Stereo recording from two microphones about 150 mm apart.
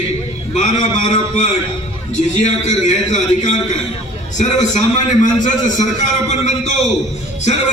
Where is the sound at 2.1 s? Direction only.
50° left (ahead or behind).